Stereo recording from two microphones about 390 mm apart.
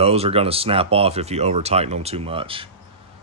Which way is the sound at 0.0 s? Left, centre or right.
Centre.